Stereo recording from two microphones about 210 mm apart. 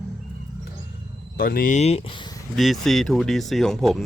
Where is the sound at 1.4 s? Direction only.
45° left (ahead or behind); by 2.4 s 20° left (ahead or behind).